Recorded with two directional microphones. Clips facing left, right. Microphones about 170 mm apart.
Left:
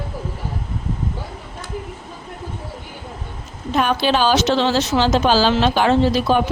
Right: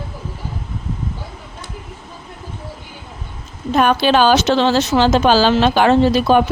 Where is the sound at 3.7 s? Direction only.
55° right (ahead or behind).